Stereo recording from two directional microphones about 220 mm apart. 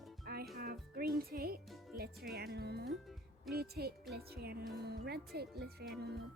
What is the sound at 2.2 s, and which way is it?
Speech, 45° right (ahead or behind).